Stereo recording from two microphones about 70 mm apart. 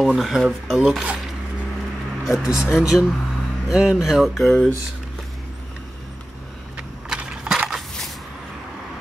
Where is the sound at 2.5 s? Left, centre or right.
Left.